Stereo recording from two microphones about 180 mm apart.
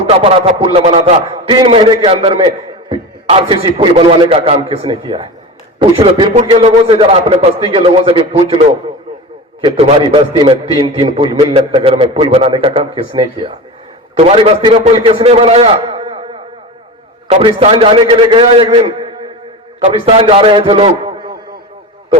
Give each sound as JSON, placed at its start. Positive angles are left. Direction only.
{"t": 0.0, "sound": "a man's voice", "side_deg": -30}